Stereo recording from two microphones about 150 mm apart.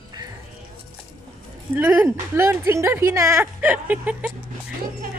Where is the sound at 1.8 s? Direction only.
10° right (ahead or behind).